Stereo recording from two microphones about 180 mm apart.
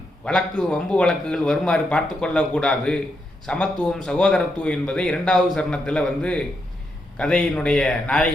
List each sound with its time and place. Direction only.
0.3 s a man's voice: 5° left (ahead or behind)